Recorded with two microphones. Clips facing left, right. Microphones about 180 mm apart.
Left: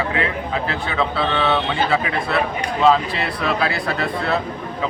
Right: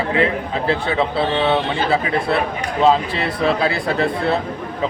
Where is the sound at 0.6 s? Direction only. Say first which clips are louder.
Right 7 dB; 30° right (ahead or behind).